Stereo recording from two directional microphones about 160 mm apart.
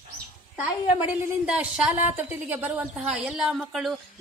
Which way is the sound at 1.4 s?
5° right (ahead or behind).